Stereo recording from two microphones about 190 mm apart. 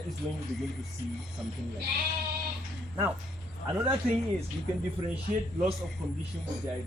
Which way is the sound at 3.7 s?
10° right (ahead or behind).